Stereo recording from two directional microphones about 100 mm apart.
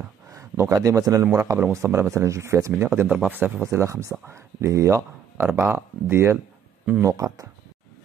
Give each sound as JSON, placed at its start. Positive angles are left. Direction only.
{"t": 0.3, "sound": "speech", "side_deg": -30}